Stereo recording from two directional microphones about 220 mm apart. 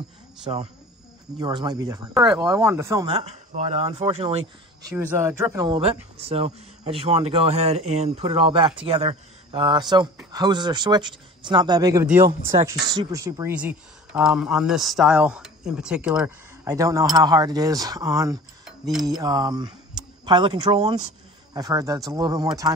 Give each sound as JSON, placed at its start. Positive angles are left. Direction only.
{"t": 0.5, "sound": "speech", "side_deg": -20}
{"t": 3.1, "sound": "speech", "side_deg": -30}
{"t": 4.8, "sound": "speech", "side_deg": -10}